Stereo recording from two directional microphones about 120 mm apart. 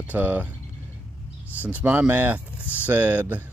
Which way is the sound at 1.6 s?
15° right (ahead or behind).